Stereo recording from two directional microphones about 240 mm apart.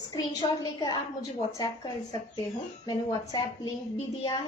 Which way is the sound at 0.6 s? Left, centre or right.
Centre.